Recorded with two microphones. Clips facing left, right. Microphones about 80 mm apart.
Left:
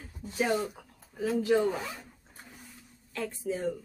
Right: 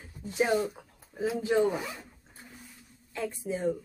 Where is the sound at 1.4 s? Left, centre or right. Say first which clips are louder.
Right 1 dB; centre.